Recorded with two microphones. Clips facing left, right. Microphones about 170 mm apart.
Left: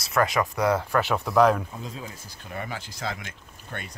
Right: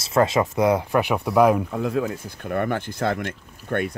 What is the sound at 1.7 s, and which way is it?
Speech, 65° right (ahead or behind).